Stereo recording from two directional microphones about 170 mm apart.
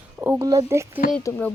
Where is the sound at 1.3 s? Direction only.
20° left (ahead or behind).